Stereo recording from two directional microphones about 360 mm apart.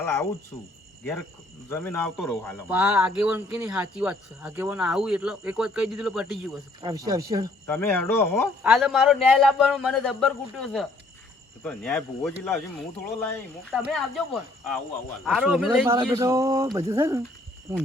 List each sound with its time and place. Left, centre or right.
0.0 s speech: centre
1.7 s a man's voice: centre
7.7 s a man's voice: centre
15.2 s speech: centre